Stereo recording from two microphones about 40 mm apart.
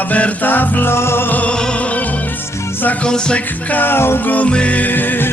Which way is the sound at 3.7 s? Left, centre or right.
Left.